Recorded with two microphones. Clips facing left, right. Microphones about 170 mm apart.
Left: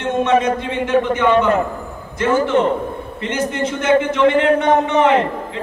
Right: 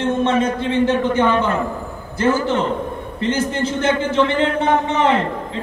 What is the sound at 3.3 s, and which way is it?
A man's voice, 30° right (ahead or behind).